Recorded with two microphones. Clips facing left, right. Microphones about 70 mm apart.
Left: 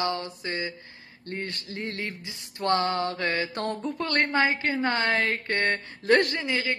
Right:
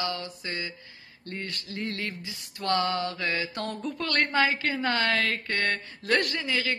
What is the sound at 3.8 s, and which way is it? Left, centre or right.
A woman's voice, left.